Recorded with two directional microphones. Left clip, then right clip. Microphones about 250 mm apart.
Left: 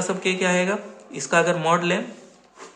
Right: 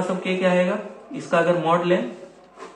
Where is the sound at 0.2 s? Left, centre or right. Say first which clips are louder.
Right 1 dB; left.